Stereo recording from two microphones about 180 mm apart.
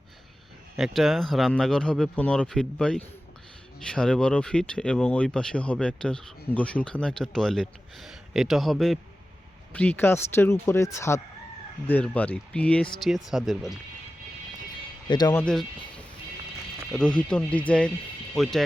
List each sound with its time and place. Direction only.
0.8 s speech: centre (ahead or behind)
15.0 s speech: 25° left (ahead or behind)
15.3 s speech: 10° left (ahead or behind)
16.9 s speech: 5° left (ahead or behind)